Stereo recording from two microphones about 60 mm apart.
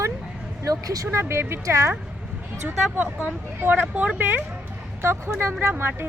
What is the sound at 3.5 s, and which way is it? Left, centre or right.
Speech, right.